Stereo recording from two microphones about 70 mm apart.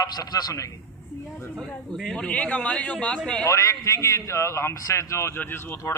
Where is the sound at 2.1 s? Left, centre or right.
Centre.